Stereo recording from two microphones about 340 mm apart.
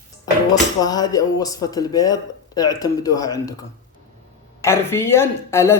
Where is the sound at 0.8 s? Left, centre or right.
Centre.